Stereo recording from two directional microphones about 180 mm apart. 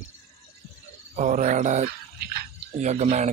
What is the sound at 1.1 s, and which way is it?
A man's voice, 45° right (ahead or behind).